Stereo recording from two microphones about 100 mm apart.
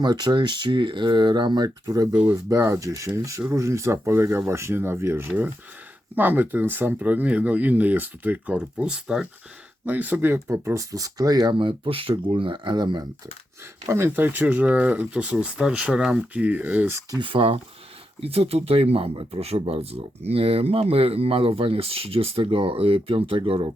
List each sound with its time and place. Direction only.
0.0 s speech: 45° right (ahead or behind)
11.5 s speech: 60° right (ahead or behind)
13.8 s speech: 25° right (ahead or behind)
17.2 s speech: 60° right (ahead or behind)
18.2 s speech: 80° right; by 23.7 s 60° right (ahead or behind)